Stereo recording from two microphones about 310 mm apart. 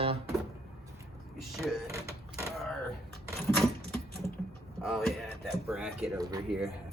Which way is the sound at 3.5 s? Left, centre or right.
Centre.